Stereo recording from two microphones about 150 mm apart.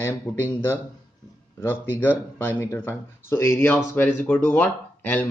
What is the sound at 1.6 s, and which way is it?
Speech, 15° left (ahead or behind).